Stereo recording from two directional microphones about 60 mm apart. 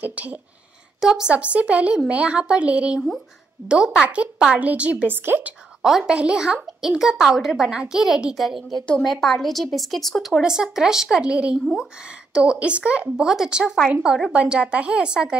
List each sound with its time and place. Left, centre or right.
0.0 s speech: right
1.0 s a child's voice: centre
1.3 s a child's voice: right
5.0 s a woman's voice: right
5.8 s a woman's voice: centre
10.4 s a child's voice: centre
13.0 s a child's voice: centre